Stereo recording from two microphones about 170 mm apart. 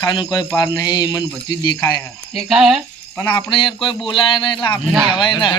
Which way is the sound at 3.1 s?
15° left (ahead or behind).